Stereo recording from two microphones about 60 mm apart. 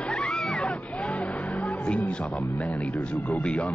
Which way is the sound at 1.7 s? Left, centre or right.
Left.